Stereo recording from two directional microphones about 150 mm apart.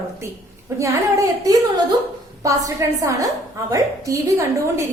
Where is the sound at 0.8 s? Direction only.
20° right (ahead or behind).